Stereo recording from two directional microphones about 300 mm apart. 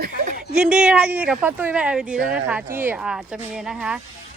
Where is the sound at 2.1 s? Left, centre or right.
Right.